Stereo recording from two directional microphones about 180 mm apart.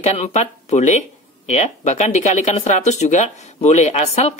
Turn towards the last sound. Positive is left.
turn(degrees=35)  # may be behind; listen again after turning